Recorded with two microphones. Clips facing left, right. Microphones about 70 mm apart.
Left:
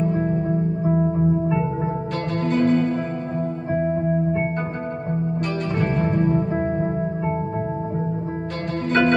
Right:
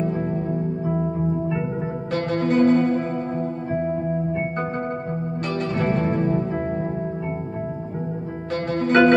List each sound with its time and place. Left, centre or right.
2.4 s music: right
5.8 s music: right
6.0 s music: left
8.8 s music: right